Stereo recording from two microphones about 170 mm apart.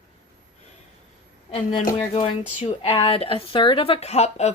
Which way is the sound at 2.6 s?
35° left (ahead or behind).